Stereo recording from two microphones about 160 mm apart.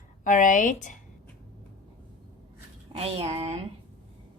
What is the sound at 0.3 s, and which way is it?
Speech, 55° left (ahead or behind).